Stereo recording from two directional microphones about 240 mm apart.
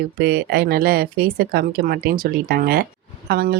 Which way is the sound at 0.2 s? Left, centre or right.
Right.